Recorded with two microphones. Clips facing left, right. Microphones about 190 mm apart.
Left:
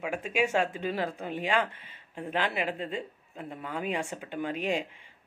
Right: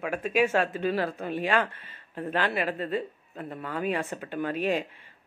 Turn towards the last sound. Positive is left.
turn(degrees=15)  # may be behind; listen again after turning